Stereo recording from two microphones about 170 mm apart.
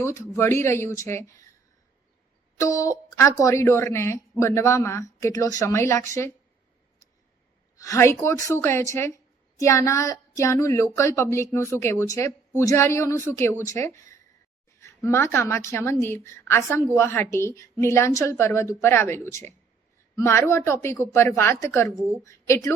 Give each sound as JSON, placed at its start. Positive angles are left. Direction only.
{"t": 0.0, "sound": "a woman's voice", "side_deg": 15}
{"t": 2.6, "sound": "a woman's voice", "side_deg": 20}
{"t": 7.8, "sound": "a woman's voice", "side_deg": 15}